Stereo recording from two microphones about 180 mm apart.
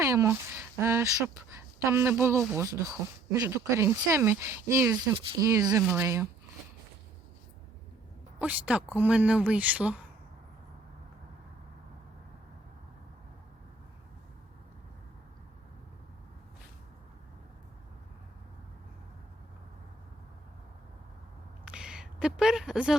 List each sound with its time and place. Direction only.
0.0 s speech: 15° right (ahead or behind)
8.4 s speech: 10° right (ahead or behind)
21.6 s a sound: 5° right (ahead or behind)